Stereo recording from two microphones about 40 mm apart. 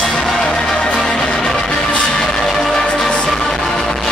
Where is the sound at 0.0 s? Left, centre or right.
Centre.